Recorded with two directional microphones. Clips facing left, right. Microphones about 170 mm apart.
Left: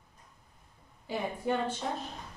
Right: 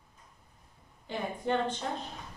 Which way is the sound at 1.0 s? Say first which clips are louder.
Left 1 dB; 5° left (ahead or behind).